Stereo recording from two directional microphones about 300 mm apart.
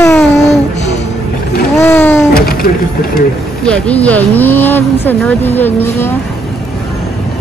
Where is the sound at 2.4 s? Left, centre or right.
Left.